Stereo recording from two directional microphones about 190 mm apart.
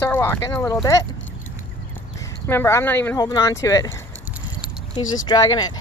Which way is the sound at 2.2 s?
15° left (ahead or behind).